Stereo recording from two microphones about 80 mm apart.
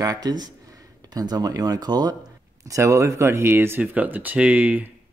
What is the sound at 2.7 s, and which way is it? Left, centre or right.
Speech, right.